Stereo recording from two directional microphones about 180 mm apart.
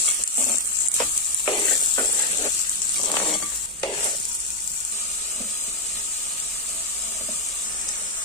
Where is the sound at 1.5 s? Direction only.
25° left (ahead or behind).